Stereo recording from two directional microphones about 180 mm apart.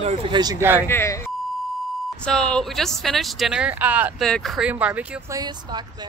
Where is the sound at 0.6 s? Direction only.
10° right (ahead or behind).